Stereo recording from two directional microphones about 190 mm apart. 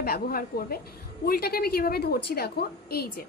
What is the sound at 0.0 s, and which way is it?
A woman's voice, 50° left (ahead or behind).